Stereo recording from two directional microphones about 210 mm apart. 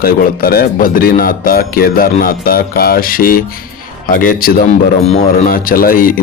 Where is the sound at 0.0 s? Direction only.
45° left (ahead or behind).